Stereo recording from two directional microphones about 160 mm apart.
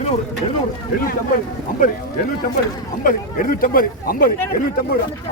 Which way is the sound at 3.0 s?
55° left (ahead or behind).